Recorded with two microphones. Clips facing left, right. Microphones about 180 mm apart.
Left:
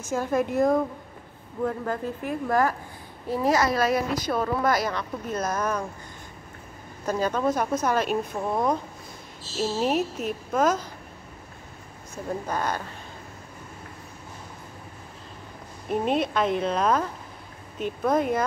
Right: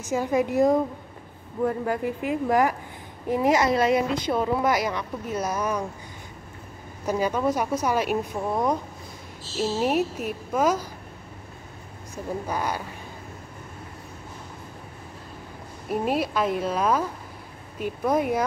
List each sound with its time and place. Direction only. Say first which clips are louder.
0.0 s a woman's voice: right 2 dB; 15° right (ahead or behind)
7.1 s a woman's voice: right 1 dB; 15° right (ahead or behind)
9.6 s a woman's voice: right 1 dB; 5° right (ahead or behind)
12.4 s a woman's voice: even; 10° right (ahead or behind)
15.9 s a woman's voice: left 1 dB; 5° right (ahead or behind)